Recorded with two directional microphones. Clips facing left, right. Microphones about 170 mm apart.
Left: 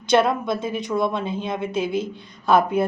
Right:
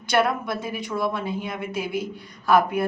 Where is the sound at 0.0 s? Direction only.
20° left (ahead or behind).